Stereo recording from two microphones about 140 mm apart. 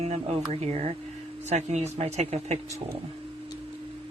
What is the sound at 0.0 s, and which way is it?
Speech, 45° right (ahead or behind).